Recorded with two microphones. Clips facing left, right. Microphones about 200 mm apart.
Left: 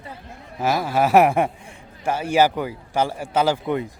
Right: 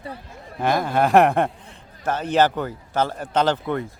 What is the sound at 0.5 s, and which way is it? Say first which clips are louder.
Speech: even; 5° left (ahead or behind).